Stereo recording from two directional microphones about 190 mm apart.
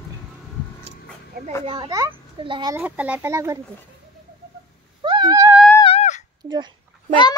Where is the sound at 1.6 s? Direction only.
25° right (ahead or behind).